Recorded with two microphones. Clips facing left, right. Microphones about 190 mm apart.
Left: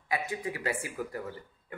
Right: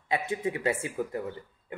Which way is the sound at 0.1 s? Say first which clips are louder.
Right 4 dB; 25° right (ahead or behind).